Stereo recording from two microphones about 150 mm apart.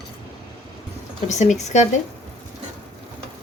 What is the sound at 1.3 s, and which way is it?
Speech, 50° left (ahead or behind).